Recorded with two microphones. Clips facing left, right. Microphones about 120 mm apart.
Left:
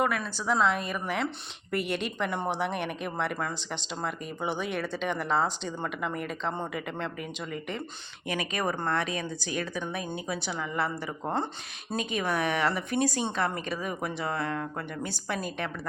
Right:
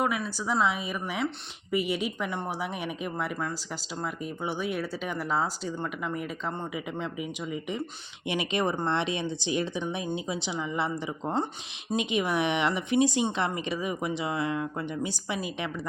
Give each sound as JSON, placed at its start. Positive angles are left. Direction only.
{"t": 0.0, "sound": "speech", "side_deg": -10}
{"t": 8.3, "sound": "speech", "side_deg": -25}